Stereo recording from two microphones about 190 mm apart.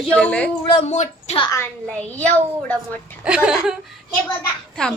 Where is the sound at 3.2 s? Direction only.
5° right (ahead or behind).